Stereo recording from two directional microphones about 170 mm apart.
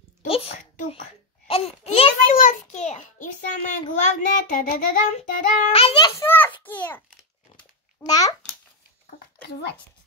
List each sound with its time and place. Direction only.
0.3 s a sound: 35° left (ahead or behind)
2.3 s a sound: 50° left (ahead or behind)
3.9 s a child's voice: 45° left (ahead or behind)
5.0 s child singing: 45° left (ahead or behind); by 6.2 s 25° left (ahead or behind)
6.6 s a child's voice: 10° left (ahead or behind)
8.1 s a child's voice: 20° left (ahead or behind)
9.5 s a child's voice: 75° left (ahead or behind)